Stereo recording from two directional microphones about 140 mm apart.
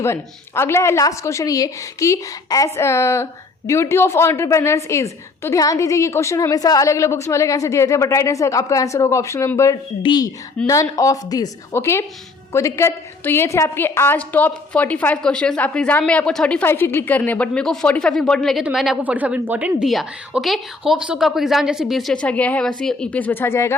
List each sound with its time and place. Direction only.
0.0 s a woman's voice: 20° left (ahead or behind)